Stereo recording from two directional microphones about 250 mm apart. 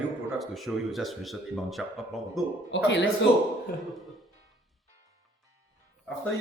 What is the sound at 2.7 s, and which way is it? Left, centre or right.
Speech, left.